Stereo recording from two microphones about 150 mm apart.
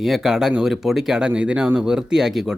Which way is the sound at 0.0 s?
Centre (ahead or behind).